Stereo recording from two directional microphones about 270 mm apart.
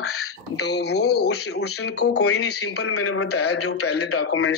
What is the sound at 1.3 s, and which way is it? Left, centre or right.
A man's voice, left.